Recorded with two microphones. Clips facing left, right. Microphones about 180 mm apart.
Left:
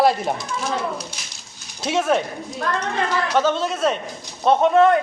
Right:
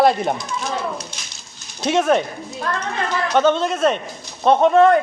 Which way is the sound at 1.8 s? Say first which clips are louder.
Right 3 dB; 5° left (ahead or behind).